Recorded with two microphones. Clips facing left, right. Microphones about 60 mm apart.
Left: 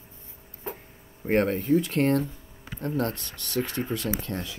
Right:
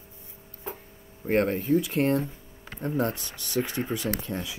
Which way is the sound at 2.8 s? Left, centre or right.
Centre.